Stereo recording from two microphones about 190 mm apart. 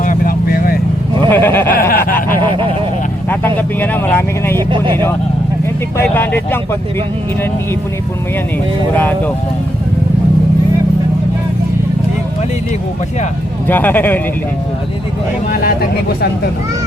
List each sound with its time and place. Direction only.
0.0 s vehicle: 45° left (ahead or behind)
1.3 s speech: 10° left (ahead or behind)
1.7 s speech: 50° left (ahead or behind)
3.2 s speech: 10° left (ahead or behind)
4.5 s speech: 25° right (ahead or behind)
6.0 s speech: 10° left (ahead or behind)
9.0 s speech: 10° left (ahead or behind)
13.7 s speech: 10° left (ahead or behind)
15.4 s speech: 50° left (ahead or behind)